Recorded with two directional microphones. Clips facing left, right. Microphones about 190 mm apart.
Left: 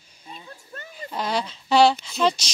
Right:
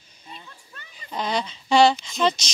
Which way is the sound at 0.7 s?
45° left (ahead or behind).